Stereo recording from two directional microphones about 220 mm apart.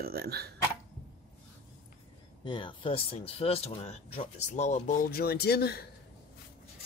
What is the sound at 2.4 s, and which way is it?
Speech, 20° left (ahead or behind).